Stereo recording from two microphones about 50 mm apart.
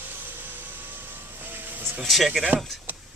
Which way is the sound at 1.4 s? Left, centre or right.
Right.